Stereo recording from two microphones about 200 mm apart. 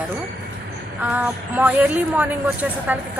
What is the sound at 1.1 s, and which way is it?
A woman's voice, 10° right (ahead or behind).